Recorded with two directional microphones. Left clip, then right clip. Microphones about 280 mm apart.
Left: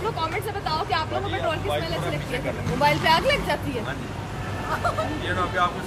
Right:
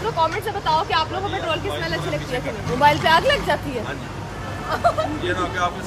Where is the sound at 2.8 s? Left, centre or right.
Centre.